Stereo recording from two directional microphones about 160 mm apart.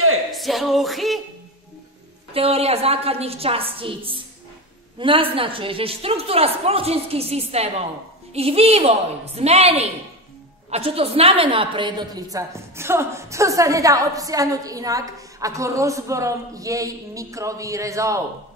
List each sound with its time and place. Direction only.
0.3 s music: centre (ahead or behind)
2.3 s a woman's voice: 40° right (ahead or behind); by 18.2 s 20° right (ahead or behind)